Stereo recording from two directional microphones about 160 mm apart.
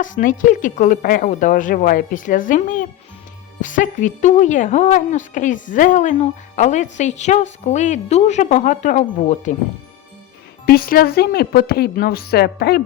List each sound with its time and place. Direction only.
0.0 s speech: 55° left (ahead or behind)
10.7 s a woman's voice: 65° left (ahead or behind)